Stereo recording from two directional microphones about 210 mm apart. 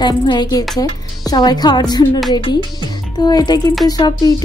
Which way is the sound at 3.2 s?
20° left (ahead or behind).